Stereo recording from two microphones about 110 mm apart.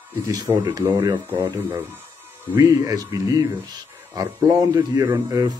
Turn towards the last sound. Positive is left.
turn(degrees=-30)  # may be behind; listen again after turning